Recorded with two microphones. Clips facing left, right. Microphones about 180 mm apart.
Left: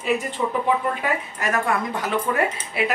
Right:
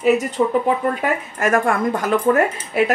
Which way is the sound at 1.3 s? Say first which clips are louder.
Right 8 dB; 50° right (ahead or behind).